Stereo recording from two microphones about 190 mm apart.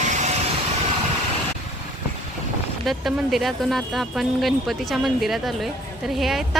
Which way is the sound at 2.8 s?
Centre (ahead or behind).